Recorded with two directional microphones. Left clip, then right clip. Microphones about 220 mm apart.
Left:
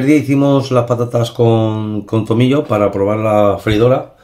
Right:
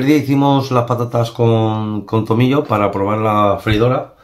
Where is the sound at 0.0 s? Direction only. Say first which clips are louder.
Left 1 dB; 10° right (ahead or behind).